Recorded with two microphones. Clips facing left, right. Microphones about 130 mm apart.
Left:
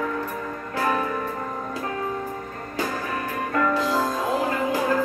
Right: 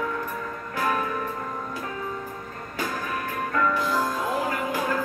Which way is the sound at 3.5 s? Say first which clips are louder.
Left 2 dB; 20° left (ahead or behind).